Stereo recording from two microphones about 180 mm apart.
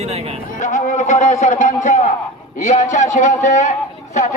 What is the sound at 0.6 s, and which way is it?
A man's voice, 45° left (ahead or behind).